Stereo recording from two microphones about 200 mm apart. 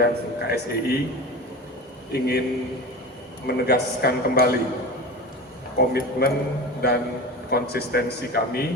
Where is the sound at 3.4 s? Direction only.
50° left (ahead or behind).